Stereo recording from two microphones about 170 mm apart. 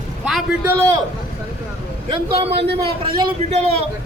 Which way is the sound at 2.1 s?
30° right (ahead or behind).